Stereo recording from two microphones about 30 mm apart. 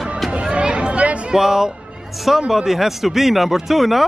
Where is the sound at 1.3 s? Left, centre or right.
Centre.